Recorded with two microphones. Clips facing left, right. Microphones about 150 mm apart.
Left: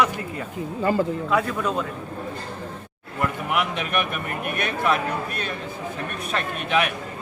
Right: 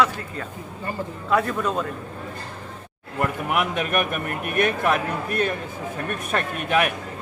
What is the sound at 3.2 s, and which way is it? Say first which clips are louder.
A man's voice: right 1 dB; 50° right (ahead or behind).